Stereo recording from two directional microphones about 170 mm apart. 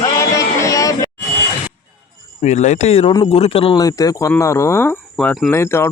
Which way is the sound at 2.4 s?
40° left (ahead or behind).